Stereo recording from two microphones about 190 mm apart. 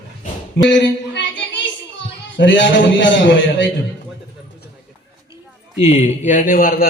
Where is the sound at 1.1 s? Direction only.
70° left (ahead or behind).